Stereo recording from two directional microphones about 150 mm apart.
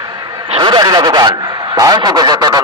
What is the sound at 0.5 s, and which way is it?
Speech, 30° right (ahead or behind).